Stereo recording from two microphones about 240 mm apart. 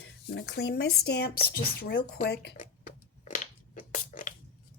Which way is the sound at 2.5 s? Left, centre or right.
Left.